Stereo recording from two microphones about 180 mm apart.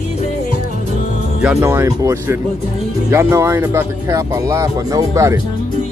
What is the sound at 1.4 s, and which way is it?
Speech, 10° right (ahead or behind).